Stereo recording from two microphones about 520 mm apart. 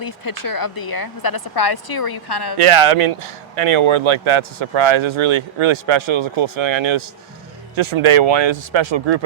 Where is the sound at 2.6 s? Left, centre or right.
Right.